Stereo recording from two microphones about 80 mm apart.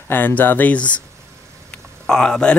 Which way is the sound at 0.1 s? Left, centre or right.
Left.